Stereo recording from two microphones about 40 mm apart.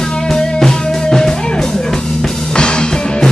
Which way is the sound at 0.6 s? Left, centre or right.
Centre.